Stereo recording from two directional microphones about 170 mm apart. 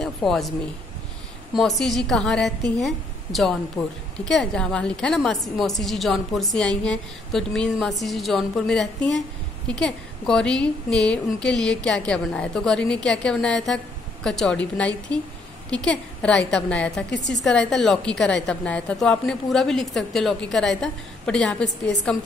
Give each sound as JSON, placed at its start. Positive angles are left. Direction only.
{"t": 0.0, "sound": "a sound", "side_deg": 0}
{"t": 1.5, "sound": "a woman's voice", "side_deg": 0}
{"t": 3.8, "sound": "a woman's voice", "side_deg": 15}
{"t": 4.2, "sound": "a woman's voice", "side_deg": 5}
{"t": 17.1, "sound": "a woman's voice", "side_deg": 90}
{"t": 17.5, "sound": "a woman's voice", "side_deg": 5}